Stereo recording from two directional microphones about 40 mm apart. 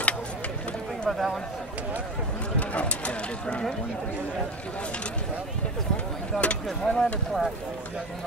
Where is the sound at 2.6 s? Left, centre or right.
Left.